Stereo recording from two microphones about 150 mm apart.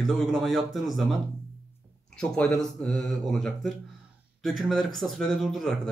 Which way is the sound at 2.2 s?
5° left (ahead or behind).